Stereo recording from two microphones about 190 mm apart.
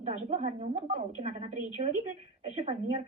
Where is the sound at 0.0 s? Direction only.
40° right (ahead or behind).